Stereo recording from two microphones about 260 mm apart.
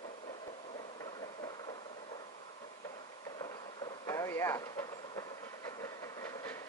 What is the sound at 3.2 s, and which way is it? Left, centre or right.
Train, centre.